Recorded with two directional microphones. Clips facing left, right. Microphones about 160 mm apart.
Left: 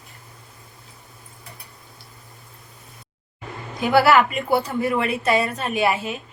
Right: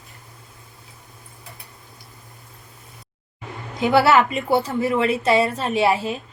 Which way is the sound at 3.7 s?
25° right (ahead or behind).